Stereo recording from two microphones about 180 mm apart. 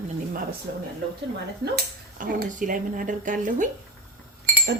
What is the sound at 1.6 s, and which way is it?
Speech, 55° right (ahead or behind).